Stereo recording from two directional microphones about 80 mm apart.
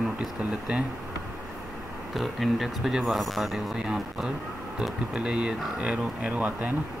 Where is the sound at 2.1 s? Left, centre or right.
Centre.